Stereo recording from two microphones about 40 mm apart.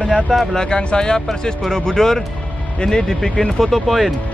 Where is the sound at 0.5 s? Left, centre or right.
Left.